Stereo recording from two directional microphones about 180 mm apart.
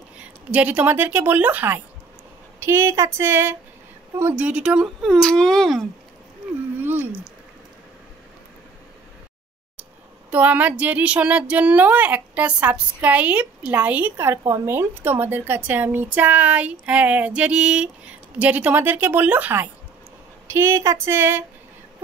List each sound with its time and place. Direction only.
0.2 s a woman's voice: 10° right (ahead or behind)
10.3 s a woman's voice: 10° right (ahead or behind)